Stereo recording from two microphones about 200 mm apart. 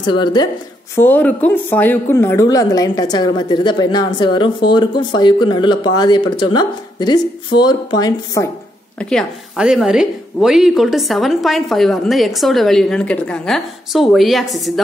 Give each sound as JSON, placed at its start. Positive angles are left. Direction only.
{"t": 0.0, "sound": "a woman's voice", "side_deg": 20}
{"t": 0.9, "sound": "a woman's voice", "side_deg": 10}
{"t": 9.1, "sound": "a woman's voice", "side_deg": 0}